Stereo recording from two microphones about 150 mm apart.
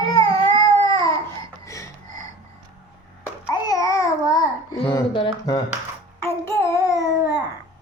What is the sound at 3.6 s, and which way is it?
Babbling, 20° left (ahead or behind).